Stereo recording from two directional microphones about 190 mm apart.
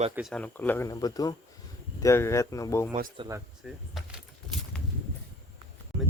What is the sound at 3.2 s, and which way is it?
Speech, 15° right (ahead or behind).